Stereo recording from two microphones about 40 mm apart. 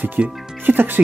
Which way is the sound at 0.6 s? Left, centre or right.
Right.